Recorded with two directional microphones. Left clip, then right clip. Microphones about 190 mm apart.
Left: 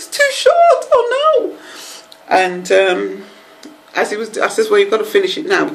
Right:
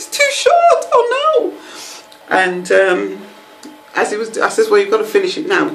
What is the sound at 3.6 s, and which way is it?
Speech, 5° left (ahead or behind).